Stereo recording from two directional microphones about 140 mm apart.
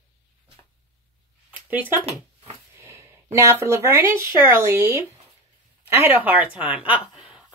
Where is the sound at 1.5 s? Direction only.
10° right (ahead or behind).